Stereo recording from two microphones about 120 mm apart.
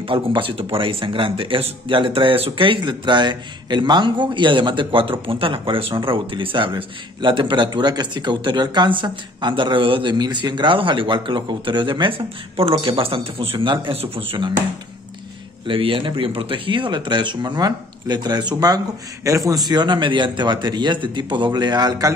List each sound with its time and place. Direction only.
0.0 s speech: 45° right (ahead or behind)
15.6 s a man's voice: 45° right (ahead or behind)